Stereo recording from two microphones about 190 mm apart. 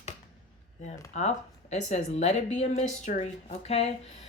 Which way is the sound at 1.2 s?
35° left (ahead or behind).